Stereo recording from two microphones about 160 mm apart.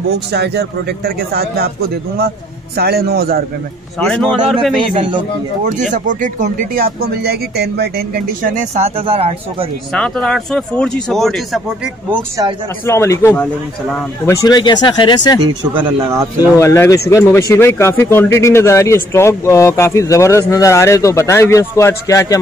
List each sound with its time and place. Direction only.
0.3 s speech: 90° right
2.7 s a man's voice: 75° right (ahead or behind)
4.0 s speech: centre (ahead or behind)
4.7 s a man's voice: 30° right (ahead or behind)
5.7 s speech: 50° right (ahead or behind); by 9.7 s 35° right (ahead or behind)
9.9 s speech: 5° left (ahead or behind)
12.8 s a man's voice: 15° left (ahead or behind)
16.0 s speech: 20° right (ahead or behind)
16.5 s a man's voice: 15° left (ahead or behind)